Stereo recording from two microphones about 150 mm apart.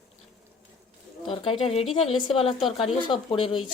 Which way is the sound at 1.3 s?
35° left (ahead or behind).